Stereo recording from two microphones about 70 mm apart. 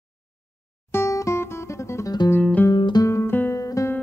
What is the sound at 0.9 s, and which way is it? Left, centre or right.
Music, left.